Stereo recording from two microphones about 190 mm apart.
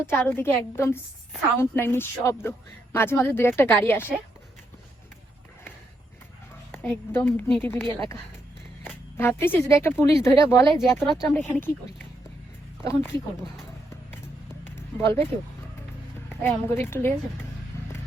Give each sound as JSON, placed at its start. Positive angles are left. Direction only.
{"t": 0.0, "sound": "a woman's voice", "side_deg": 10}
{"t": 6.7, "sound": "a woman's voice", "side_deg": 10}
{"t": 11.0, "sound": "speech", "side_deg": 0}
{"t": 11.3, "sound": "a woman's voice", "side_deg": 10}
{"t": 12.8, "sound": "speech", "side_deg": 15}
{"t": 14.8, "sound": "speech", "side_deg": 15}
{"t": 16.3, "sound": "a woman's voice", "side_deg": 10}
{"t": 17.7, "sound": "vehicle", "side_deg": 15}